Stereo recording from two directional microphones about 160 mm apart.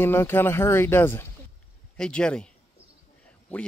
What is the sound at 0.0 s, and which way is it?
Speech, 15° left (ahead or behind).